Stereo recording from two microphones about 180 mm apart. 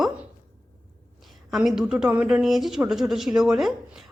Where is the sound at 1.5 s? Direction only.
5° right (ahead or behind).